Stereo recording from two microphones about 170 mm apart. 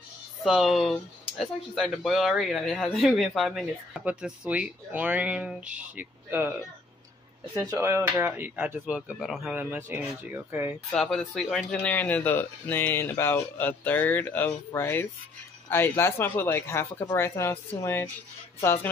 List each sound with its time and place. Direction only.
0.4 s speech: centre (ahead or behind)
7.5 s speech: 20° right (ahead or behind)
10.9 s speech: centre (ahead or behind)